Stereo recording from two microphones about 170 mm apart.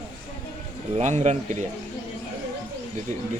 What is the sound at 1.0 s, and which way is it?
Speech, 45° right (ahead or behind).